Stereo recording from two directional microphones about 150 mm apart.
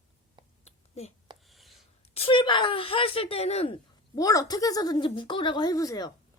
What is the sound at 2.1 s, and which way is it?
Speech, 35° left (ahead or behind).